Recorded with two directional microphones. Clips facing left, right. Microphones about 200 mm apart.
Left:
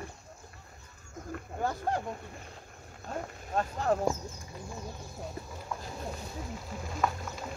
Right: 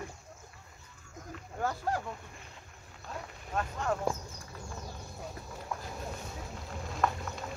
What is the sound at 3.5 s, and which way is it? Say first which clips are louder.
Speech: left 4 dB; 35° left (ahead or behind).